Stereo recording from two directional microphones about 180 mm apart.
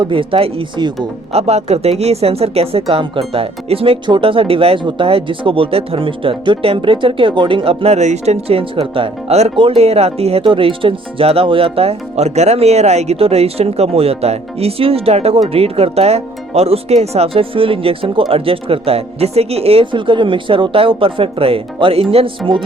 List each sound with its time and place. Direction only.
0.0 s speech: 30° right (ahead or behind)